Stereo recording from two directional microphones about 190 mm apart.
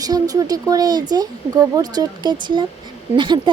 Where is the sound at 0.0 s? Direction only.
20° right (ahead or behind).